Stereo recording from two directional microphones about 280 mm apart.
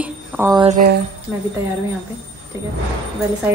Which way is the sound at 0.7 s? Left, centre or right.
Right.